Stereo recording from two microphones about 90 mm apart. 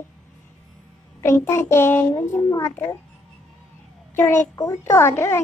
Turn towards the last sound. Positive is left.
turn(degrees=30)  # may be behind; listen again after turning